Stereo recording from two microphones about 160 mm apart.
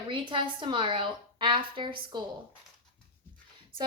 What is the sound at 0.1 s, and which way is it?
A woman's voice, 30° right (ahead or behind).